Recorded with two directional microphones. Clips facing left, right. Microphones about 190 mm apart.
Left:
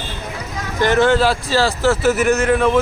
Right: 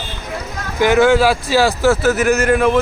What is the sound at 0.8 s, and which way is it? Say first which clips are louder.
Speech: right 3 dB; 10° right (ahead or behind).